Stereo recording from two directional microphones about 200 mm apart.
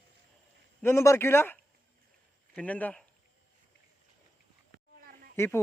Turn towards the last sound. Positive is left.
turn(degrees=10)  # may be behind; listen again after turning